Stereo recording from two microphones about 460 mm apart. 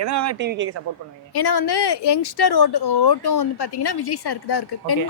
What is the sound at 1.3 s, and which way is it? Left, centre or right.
A woman's voice, left.